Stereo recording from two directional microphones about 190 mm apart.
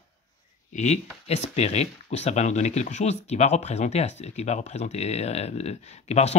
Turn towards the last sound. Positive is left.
turn(degrees=35)  # may be behind; listen again after turning